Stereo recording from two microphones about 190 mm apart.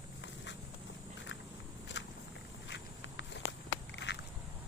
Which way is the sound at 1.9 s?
70° left (ahead or behind).